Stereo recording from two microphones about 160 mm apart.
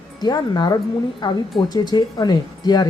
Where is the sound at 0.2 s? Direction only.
25° left (ahead or behind).